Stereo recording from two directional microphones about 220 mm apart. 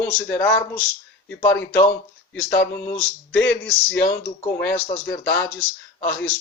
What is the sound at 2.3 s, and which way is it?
Speech, 50° left (ahead or behind).